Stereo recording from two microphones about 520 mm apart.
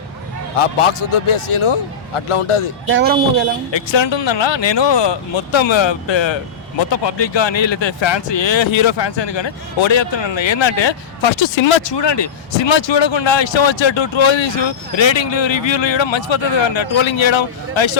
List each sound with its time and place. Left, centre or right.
0.6 s a man's voice: left
2.9 s speech: centre
3.7 s speech: left